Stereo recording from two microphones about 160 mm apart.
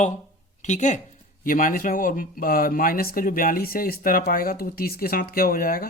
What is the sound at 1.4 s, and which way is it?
Speech, 60° left (ahead or behind).